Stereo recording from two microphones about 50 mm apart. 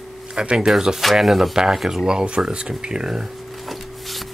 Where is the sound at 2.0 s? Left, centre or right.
Centre.